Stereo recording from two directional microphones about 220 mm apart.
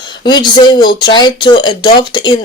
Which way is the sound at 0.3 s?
20° left (ahead or behind).